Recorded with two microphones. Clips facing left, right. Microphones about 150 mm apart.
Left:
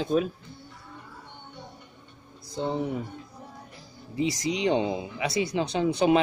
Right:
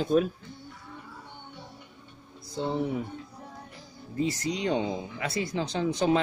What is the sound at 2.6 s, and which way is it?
Speech, 15° left (ahead or behind).